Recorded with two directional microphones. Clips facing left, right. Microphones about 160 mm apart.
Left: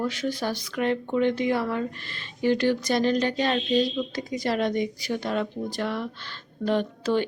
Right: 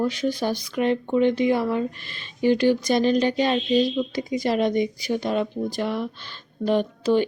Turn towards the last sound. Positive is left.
turn(degrees=-15)  # may be behind; listen again after turning